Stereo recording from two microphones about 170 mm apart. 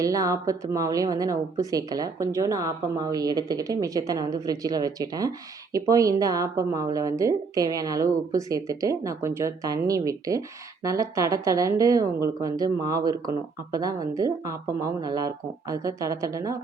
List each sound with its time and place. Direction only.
0.0 s a woman's voice: 20° right (ahead or behind)